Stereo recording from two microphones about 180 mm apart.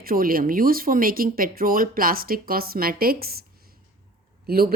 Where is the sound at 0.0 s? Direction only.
55° right (ahead or behind).